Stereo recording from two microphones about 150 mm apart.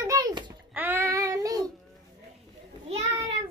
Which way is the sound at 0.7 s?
15° right (ahead or behind).